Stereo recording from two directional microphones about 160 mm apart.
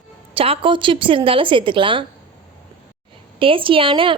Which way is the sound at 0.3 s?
35° right (ahead or behind).